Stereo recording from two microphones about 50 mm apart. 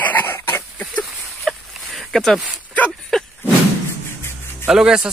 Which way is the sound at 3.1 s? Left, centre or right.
Centre.